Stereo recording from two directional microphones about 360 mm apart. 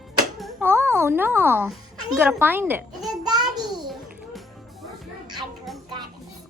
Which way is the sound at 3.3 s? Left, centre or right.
Centre.